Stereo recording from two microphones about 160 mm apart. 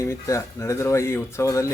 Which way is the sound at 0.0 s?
20° left (ahead or behind).